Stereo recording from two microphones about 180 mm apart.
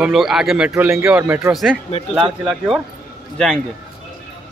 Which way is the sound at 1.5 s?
Centre (ahead or behind).